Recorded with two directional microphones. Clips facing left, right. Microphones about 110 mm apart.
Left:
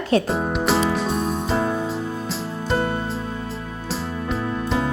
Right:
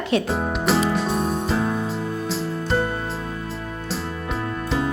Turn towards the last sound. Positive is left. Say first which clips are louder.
# left 2 dB
turn(degrees=0)  # may be behind; listen again after turning